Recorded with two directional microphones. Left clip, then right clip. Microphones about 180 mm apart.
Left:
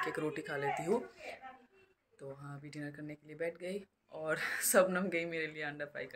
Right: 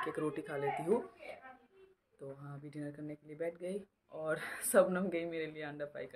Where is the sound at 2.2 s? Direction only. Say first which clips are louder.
Left 1 dB; 5° right (ahead or behind).